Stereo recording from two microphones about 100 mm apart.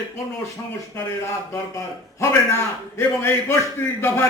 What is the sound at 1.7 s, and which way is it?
A man's voice, 30° left (ahead or behind).